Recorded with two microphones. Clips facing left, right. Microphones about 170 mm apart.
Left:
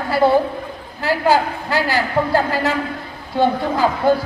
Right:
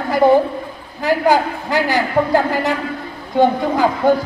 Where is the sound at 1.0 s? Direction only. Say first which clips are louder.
Right 2 dB; 15° right (ahead or behind).